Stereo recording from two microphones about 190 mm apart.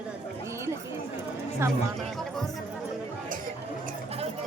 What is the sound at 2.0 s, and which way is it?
Speech, centre (ahead or behind).